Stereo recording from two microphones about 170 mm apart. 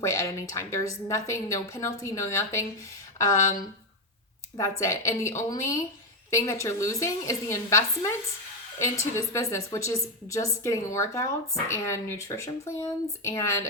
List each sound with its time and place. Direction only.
0.0 s speech: 15° left (ahead or behind)
4.5 s speech: 20° left (ahead or behind)